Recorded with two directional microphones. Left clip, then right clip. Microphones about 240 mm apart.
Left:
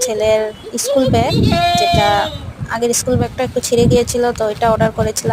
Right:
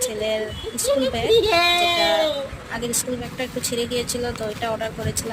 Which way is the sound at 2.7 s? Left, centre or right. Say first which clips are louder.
Left 11 dB; left.